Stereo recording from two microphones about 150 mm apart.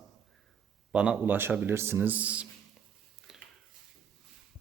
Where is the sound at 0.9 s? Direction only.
5° right (ahead or behind).